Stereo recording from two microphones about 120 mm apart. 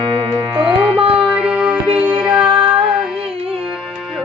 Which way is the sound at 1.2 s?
10° right (ahead or behind).